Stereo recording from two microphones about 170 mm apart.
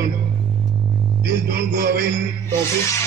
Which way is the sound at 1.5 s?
65° right (ahead or behind).